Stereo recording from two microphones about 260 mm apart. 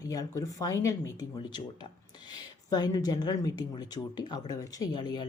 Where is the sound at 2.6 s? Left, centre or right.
Centre.